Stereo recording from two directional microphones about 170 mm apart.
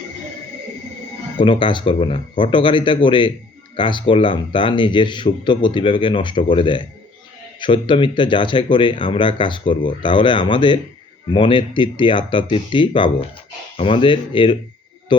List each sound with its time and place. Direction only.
1.4 s speech: 30° left (ahead or behind)